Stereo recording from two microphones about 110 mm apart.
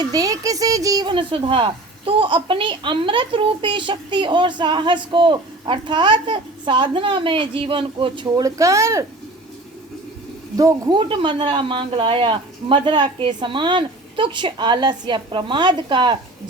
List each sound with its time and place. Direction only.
0.0 s a child's voice: 35° right (ahead or behind)
1.1 s a woman's voice: 50° right (ahead or behind)
8.4 s speech: 30° right (ahead or behind)
10.8 s a woman's voice: 50° right (ahead or behind)